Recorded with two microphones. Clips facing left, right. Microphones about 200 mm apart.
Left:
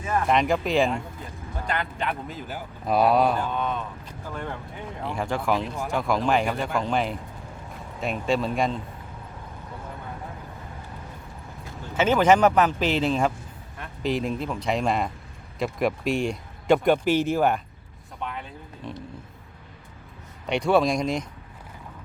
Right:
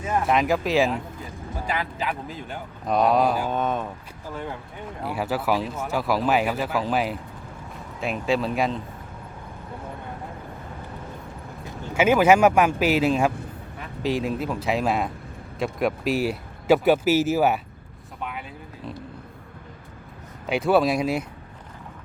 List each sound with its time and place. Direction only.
0.3 s speech: centre (ahead or behind)
3.5 s speech: 45° right (ahead or behind)
5.0 s speech: 5° right (ahead or behind)
11.9 s speech: 10° right (ahead or behind)
18.2 s vehicle: 5° right (ahead or behind)
20.5 s speech: 5° right (ahead or behind)